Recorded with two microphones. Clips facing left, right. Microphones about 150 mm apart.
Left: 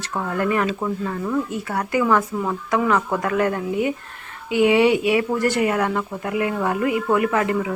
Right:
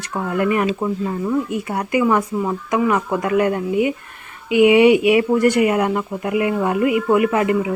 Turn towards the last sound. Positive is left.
turn(degrees=-15)  # may be behind; listen again after turning